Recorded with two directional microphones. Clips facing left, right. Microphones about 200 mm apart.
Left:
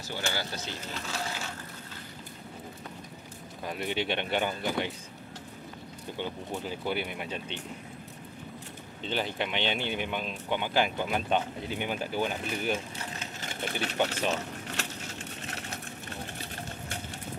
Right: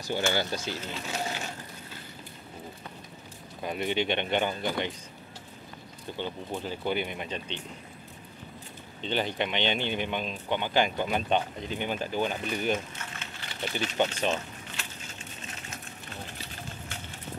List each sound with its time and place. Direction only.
0.1 s speech: 20° right (ahead or behind)
1.0 s crushing: 20° right (ahead or behind)
3.6 s speech: centre (ahead or behind)
6.1 s speech: 10° left (ahead or behind)
9.0 s speech: 5° left (ahead or behind)
12.7 s a sound: 35° left (ahead or behind); by 13.9 s 55° left (ahead or behind)
14.8 s a sound: 70° left (ahead or behind)